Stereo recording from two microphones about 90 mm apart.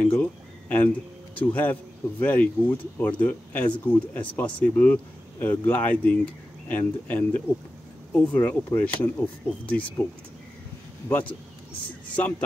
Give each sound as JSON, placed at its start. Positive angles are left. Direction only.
{"t": 0.2, "sound": "a sound", "side_deg": 15}
{"t": 1.5, "sound": "speech", "side_deg": 20}
{"t": 11.1, "sound": "speech", "side_deg": 20}